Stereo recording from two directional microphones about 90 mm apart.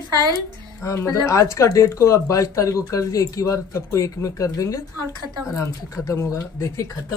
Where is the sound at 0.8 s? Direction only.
30° left (ahead or behind).